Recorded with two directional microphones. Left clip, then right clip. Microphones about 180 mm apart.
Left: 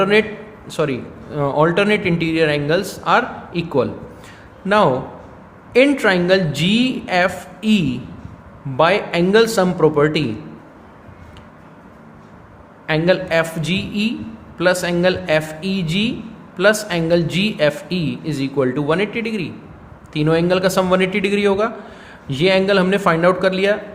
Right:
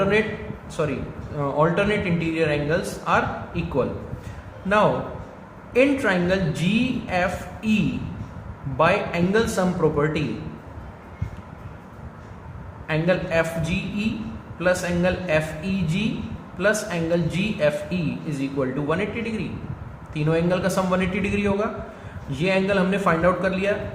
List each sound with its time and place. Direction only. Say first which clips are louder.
0.0 s a man's voice: left 6 dB; 45° left (ahead or behind)
5.7 s a man's voice: left 6 dB; 50° left (ahead or behind)
8.8 s a man's voice: left 5 dB; 45° left (ahead or behind)
12.9 s a man's voice: left 6 dB; 45° left (ahead or behind)